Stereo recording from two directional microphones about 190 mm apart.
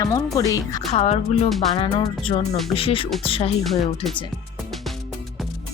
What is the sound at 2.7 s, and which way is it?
Speech, 30° left (ahead or behind).